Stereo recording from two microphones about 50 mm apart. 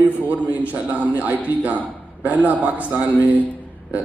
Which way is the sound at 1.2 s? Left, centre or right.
Right.